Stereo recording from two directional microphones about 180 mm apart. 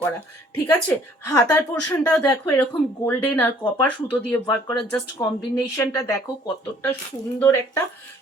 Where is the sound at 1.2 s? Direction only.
20° left (ahead or behind).